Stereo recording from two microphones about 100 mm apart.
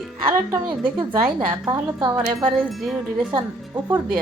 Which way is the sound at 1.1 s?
45° right (ahead or behind).